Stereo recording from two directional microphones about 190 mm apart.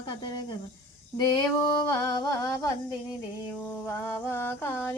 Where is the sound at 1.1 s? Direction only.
20° left (ahead or behind).